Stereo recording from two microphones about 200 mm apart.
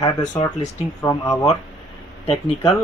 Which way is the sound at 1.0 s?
15° left (ahead or behind).